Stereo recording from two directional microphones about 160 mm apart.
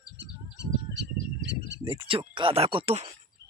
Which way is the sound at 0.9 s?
90° right.